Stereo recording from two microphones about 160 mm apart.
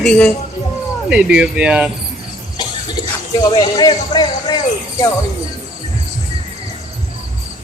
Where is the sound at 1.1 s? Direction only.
5° right (ahead or behind).